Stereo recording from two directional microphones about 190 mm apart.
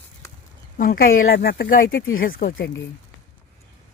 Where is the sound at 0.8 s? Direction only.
50° left (ahead or behind).